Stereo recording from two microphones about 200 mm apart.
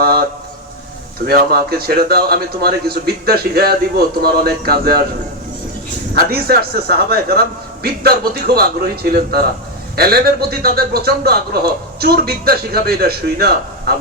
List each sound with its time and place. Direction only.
0.0 s a sound: 50° right (ahead or behind)
1.2 s a man's voice: 50° right (ahead or behind)
6.3 s a man's voice: 50° right (ahead or behind)